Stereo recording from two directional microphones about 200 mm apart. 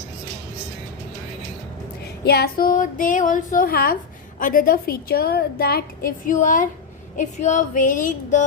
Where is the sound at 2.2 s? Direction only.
50° left (ahead or behind).